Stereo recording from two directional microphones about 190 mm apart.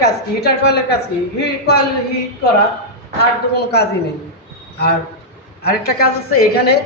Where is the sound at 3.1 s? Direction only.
60° left (ahead or behind).